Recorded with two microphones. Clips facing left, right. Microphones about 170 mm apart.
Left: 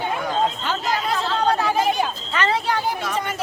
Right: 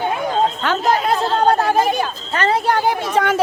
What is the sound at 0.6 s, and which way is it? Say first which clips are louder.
A woman's voice: right 6 dB; 65° right (ahead or behind).